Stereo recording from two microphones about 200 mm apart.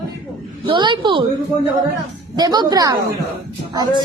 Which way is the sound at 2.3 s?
20° right (ahead or behind).